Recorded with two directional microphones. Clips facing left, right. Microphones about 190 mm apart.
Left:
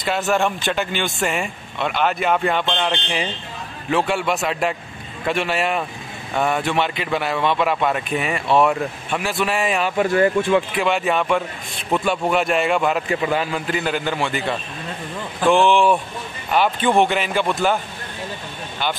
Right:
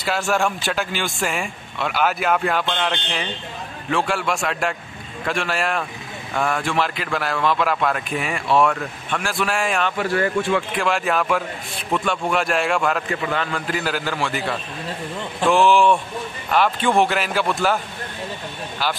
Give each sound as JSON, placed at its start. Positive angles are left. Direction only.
{"t": 0.3, "sound": "speech", "side_deg": 0}
{"t": 9.9, "sound": "speech", "side_deg": 20}
{"t": 10.8, "sound": "speech", "side_deg": 0}
{"t": 13.1, "sound": "a man's voice", "side_deg": 15}
{"t": 13.7, "sound": "speech", "side_deg": 0}
{"t": 15.4, "sound": "speech", "side_deg": 0}